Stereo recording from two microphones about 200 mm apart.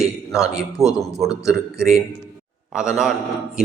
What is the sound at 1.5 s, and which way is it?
A man's voice, 5° right (ahead or behind).